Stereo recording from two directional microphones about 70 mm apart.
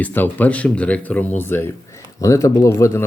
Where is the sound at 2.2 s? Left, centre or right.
Left.